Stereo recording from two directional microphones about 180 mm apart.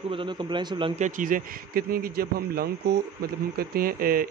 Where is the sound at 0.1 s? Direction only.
25° right (ahead or behind).